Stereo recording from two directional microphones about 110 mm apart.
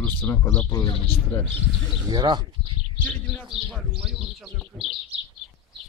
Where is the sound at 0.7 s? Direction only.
30° left (ahead or behind).